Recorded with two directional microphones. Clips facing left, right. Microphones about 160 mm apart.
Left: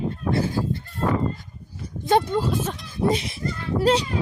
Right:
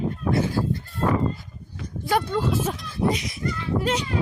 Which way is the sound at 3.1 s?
30° left (ahead or behind).